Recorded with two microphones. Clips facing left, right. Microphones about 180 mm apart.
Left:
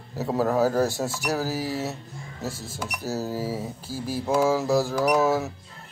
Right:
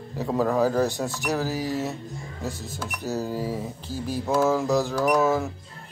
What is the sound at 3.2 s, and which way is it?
Speech, 5° left (ahead or behind).